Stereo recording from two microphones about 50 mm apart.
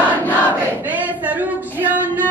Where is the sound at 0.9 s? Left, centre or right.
Right.